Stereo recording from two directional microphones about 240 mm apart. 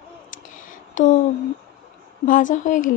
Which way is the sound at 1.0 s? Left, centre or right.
Left.